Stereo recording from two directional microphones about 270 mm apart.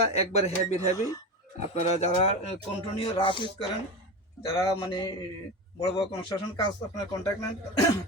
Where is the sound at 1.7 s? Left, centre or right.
Left.